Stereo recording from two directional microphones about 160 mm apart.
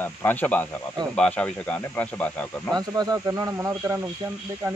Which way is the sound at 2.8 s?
25° right (ahead or behind).